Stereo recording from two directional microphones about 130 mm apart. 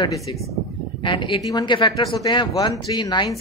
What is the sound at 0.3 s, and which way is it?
A woman's voice, 35° left (ahead or behind).